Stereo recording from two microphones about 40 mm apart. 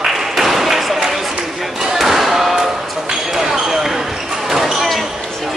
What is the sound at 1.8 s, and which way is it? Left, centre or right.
Slam, centre.